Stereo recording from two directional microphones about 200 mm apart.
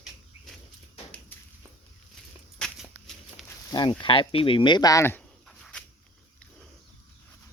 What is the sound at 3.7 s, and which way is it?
Speech, 25° left (ahead or behind).